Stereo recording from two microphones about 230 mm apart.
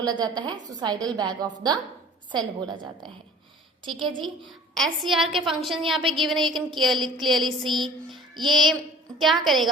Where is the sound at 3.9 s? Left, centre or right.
Centre.